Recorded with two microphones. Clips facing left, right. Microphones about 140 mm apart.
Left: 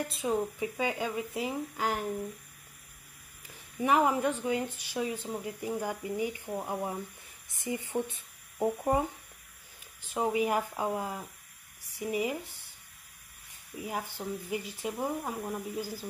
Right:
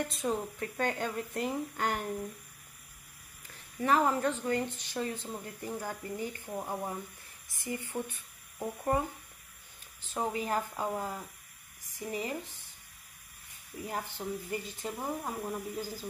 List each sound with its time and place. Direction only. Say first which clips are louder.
0.0 s speech: left 2 dB; 5° left (ahead or behind)
3.5 s speech: left 1 dB; 15° left (ahead or behind)
10.0 s speech: left 5 dB; 15° left (ahead or behind)
13.8 s speech: left 1 dB; 10° left (ahead or behind)